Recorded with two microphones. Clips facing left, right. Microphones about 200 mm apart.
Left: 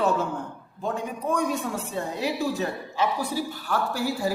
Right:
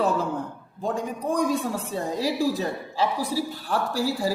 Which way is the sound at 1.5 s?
35° right (ahead or behind).